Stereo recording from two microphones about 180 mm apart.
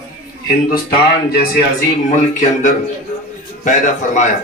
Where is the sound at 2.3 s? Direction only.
40° left (ahead or behind).